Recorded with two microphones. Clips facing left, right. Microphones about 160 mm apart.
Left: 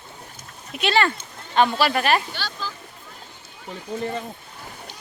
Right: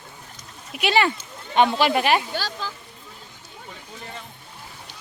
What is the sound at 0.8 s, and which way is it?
Speech, 15° right (ahead or behind).